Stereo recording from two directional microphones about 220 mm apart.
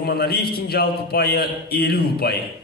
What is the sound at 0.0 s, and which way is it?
Speech, 45° left (ahead or behind).